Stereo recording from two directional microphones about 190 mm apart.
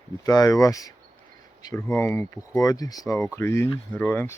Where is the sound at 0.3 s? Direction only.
20° left (ahead or behind).